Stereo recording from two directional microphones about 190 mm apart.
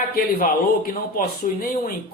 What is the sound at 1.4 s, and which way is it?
Speech, 40° left (ahead or behind).